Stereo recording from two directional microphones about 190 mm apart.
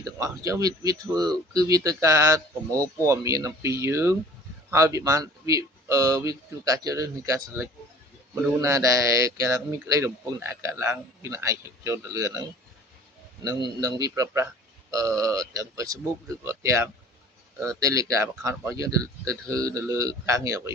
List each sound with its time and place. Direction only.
0.0 s speech: 15° right (ahead or behind)